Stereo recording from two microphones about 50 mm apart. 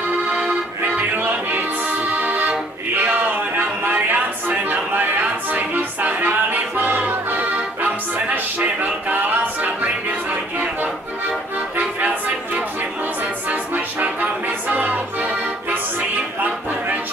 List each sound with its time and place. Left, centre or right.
0.3 s music: right
1.1 s music: right
11.7 s music: right
13.5 s music: right